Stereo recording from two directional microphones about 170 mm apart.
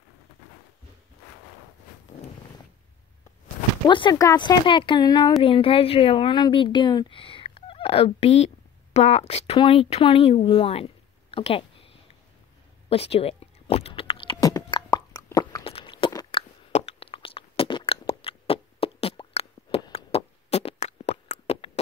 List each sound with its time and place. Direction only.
3.8 s speech: 25° left (ahead or behind)
12.9 s a sound: 35° left (ahead or behind)
19.9 s beatboxing: 35° left (ahead or behind)